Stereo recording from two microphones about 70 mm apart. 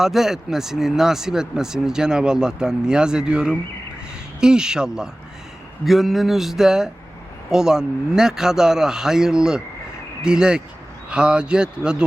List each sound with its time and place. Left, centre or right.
0.0 s speech: centre